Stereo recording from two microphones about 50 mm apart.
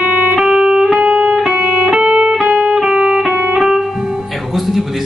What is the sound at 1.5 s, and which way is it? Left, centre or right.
Music, right.